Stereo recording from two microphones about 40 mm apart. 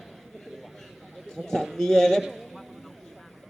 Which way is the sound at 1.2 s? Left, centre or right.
Centre.